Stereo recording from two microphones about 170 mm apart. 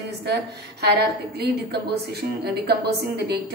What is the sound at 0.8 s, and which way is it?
A woman's voice, 70° right (ahead or behind).